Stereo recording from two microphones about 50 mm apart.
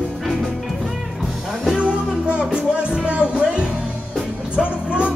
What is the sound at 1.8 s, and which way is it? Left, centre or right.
Music, right.